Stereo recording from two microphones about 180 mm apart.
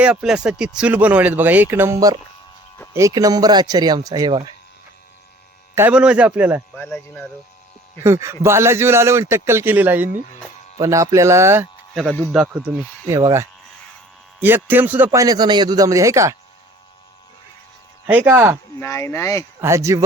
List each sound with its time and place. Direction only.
0.0 s speech: 5° right (ahead or behind); by 4.5 s 25° right (ahead or behind)
5.7 s speech: 10° right (ahead or behind)
6.7 s speech: 10° left (ahead or behind)
8.0 s speech: 15° right (ahead or behind)
12.3 s speech: 5° right (ahead or behind)
18.0 s speech: 10° right (ahead or behind)
18.8 s speech: 15° left (ahead or behind)
19.5 s speech: 15° right (ahead or behind)